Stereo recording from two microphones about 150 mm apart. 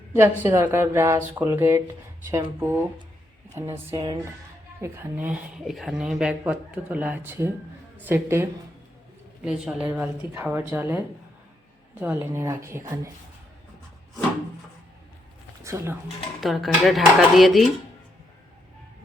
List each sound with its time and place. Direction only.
0.1 s speech: 15° right (ahead or behind)
15.6 s speech: 20° right (ahead or behind)
16.4 s speech: centre (ahead or behind)